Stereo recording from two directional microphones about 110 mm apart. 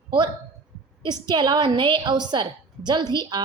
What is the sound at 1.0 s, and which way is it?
A woman's voice, 40° right (ahead or behind).